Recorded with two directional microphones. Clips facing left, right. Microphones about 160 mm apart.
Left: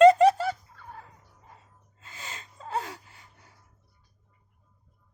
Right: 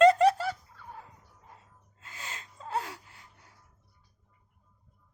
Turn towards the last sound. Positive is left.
turn(degrees=0)  # may be behind; listen again after turning